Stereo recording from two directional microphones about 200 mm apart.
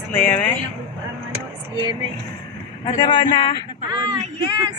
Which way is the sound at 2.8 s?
25° left (ahead or behind).